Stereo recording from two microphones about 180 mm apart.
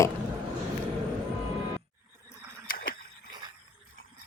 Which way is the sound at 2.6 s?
55° left (ahead or behind).